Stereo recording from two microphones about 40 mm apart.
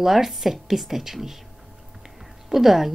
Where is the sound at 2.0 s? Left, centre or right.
Centre.